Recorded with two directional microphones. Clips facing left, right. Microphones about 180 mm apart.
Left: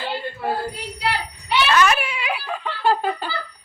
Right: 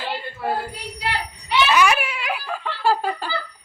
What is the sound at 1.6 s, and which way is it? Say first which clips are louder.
Giggle: even; 10° right (ahead or behind).